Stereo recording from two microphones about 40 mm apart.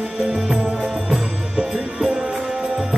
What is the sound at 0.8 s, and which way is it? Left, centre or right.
Music, centre.